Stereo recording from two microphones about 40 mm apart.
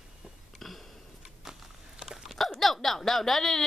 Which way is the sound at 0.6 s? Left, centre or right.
Centre.